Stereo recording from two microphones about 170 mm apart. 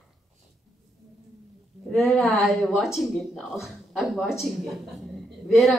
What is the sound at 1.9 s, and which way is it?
Speech, centre (ahead or behind).